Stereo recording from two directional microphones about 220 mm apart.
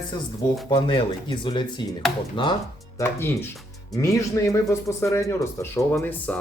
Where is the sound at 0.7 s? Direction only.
20° left (ahead or behind).